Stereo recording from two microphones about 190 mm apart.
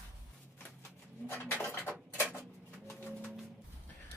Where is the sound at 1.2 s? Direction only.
10° left (ahead or behind).